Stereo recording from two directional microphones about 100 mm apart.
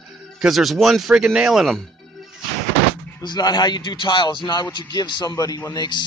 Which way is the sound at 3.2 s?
40° left (ahead or behind).